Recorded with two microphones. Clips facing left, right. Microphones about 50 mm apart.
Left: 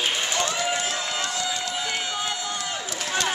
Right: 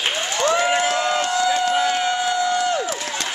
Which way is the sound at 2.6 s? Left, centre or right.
Right.